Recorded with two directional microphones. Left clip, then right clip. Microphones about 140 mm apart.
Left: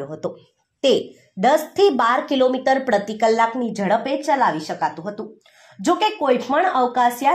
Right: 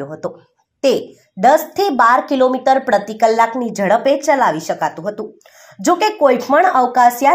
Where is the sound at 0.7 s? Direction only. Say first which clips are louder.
Right 3 dB; 10° right (ahead or behind).